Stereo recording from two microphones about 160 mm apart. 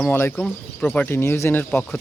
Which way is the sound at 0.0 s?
10° left (ahead or behind).